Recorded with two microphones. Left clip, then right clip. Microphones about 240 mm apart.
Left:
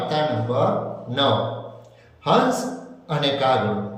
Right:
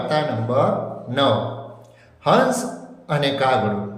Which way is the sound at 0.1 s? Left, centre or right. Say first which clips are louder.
Right 3 dB; centre.